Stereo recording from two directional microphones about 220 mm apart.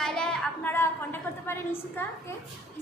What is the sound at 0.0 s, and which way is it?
A woman's voice, 5° left (ahead or behind).